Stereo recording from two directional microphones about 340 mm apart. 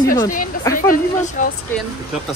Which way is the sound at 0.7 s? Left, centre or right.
Left.